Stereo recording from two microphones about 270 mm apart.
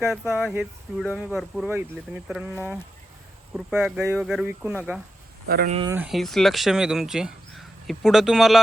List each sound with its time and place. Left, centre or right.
0.0 s speech: centre
3.5 s speech: centre
5.5 s speech: right
5.7 s speech: centre